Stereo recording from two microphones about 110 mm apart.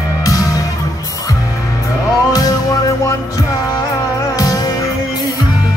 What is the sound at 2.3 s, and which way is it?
Music, 35° left (ahead or behind).